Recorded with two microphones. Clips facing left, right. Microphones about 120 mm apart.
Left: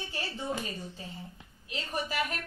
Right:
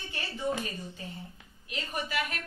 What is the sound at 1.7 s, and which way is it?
Speech, 40° left (ahead or behind).